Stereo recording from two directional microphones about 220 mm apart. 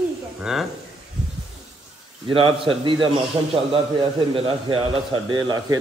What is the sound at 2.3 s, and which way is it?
A man's voice, 25° right (ahead or behind).